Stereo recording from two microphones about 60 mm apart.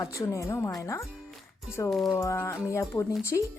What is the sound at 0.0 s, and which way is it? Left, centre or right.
Speech, left.